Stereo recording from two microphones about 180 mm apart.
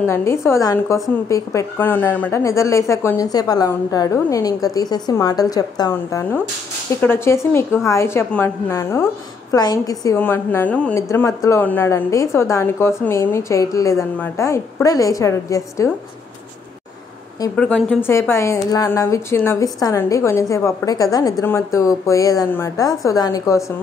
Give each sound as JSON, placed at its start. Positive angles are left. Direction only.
{"t": 0.0, "sound": "a woman's voice", "side_deg": 15}
{"t": 17.6, "sound": "a woman's voice", "side_deg": 5}